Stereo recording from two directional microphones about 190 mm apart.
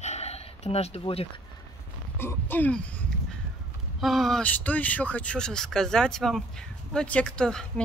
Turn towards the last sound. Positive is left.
turn(degrees=5)  # may be behind; listen again after turning